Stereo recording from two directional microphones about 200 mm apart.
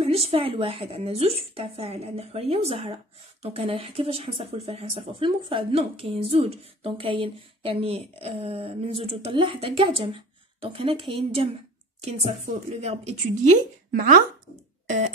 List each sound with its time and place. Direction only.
0.0 s speech: 30° right (ahead or behind)
13.9 s speech: 45° right (ahead or behind)
14.9 s a sound: 35° right (ahead or behind)